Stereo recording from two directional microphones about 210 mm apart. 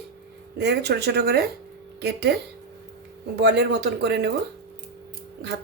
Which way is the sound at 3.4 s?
55° right (ahead or behind).